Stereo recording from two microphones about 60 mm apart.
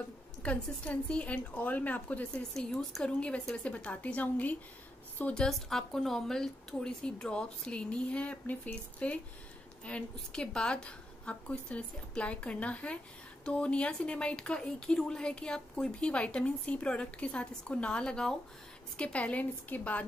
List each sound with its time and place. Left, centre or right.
0.4 s a woman's voice: left
2.5 s a woman's voice: centre; by 4.6 s left
5.3 s a woman's voice: centre; by 20.1 s left